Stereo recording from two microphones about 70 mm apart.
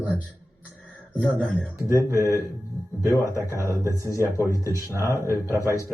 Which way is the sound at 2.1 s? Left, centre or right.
Left.